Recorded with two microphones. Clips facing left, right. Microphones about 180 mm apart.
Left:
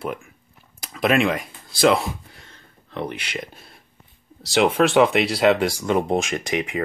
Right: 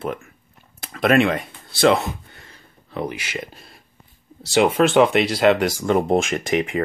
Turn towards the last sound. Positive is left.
turn(degrees=-45)  # may be behind; listen again after turning